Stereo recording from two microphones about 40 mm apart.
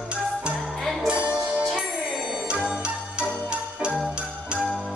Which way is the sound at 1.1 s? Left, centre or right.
Right.